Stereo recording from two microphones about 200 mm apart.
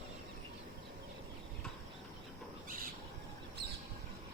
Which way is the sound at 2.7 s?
45° right (ahead or behind).